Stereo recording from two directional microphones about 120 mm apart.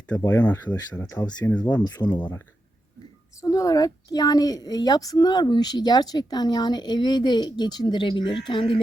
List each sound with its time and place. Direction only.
0.1 s speech: 15° left (ahead or behind)
1.0 s speech: 30° left (ahead or behind)
1.5 s speech: 10° left (ahead or behind)
2.0 s a woman's voice: 35° left (ahead or behind)
3.4 s a woman's voice: 30° left (ahead or behind)